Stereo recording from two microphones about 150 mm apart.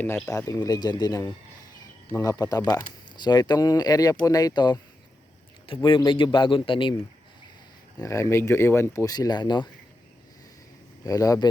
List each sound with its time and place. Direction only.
0.3 s a man's voice: 20° left (ahead or behind)
7.9 s speech: 20° left (ahead or behind)
11.0 s speech: 25° left (ahead or behind)